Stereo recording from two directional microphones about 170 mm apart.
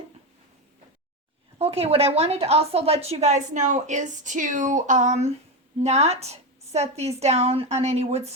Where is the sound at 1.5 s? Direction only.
35° right (ahead or behind).